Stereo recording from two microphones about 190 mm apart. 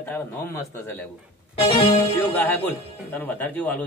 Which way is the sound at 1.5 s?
30° left (ahead or behind).